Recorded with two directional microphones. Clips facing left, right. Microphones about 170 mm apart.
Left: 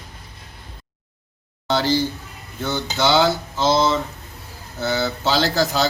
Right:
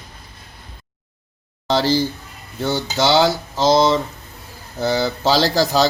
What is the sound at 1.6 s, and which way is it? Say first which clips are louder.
Speech: right 2 dB; 35° right (ahead or behind).